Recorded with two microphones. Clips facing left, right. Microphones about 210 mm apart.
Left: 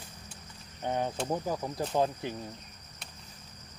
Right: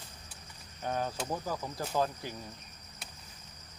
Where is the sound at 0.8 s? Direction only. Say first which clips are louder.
Left 3 dB; 20° left (ahead or behind).